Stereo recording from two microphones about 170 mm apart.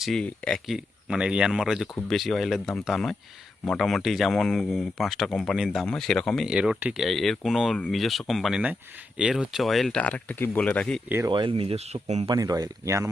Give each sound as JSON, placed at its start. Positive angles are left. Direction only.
{"t": 0.0, "sound": "speech", "side_deg": 5}
{"t": 11.3, "sound": "speech", "side_deg": -30}
{"t": 12.3, "sound": "speech", "side_deg": -20}